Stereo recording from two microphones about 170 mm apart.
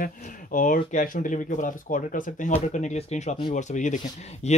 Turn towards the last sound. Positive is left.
turn(degrees=45)  # may be behind; listen again after turning